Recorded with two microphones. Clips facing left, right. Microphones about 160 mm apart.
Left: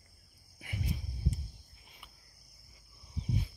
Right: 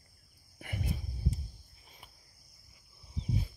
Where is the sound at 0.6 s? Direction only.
55° right (ahead or behind).